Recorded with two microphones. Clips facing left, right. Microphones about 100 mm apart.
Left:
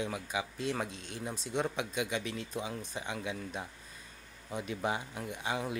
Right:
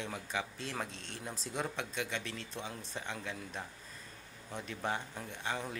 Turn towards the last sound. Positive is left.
turn(degrees=10)  # may be behind; listen again after turning